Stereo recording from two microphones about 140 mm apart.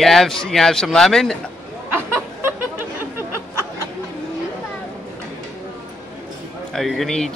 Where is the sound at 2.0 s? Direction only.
15° right (ahead or behind).